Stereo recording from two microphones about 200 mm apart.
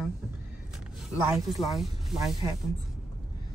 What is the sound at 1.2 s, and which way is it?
A woman's voice, centre (ahead or behind).